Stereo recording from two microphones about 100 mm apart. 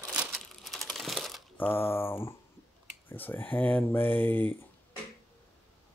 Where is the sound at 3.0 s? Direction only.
20° left (ahead or behind).